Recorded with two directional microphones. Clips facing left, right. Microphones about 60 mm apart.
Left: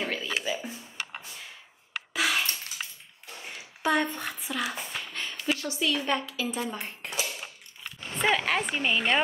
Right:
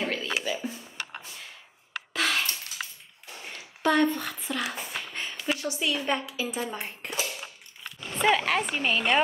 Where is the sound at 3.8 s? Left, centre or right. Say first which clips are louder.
Right 3 dB; centre.